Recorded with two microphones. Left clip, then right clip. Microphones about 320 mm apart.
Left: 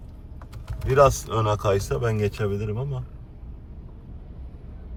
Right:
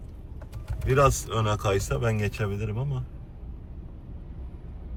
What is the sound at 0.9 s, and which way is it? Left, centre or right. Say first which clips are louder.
Speech: left 4 dB; centre.